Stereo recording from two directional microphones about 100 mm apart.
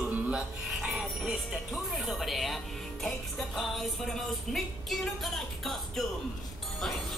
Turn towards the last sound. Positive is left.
turn(degrees=0)  # may be behind; listen again after turning